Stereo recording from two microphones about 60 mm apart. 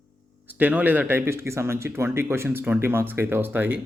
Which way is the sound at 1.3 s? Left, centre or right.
Right.